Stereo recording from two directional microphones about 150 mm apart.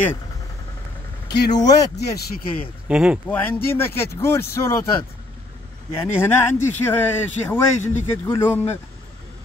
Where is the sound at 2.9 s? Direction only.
5° right (ahead or behind).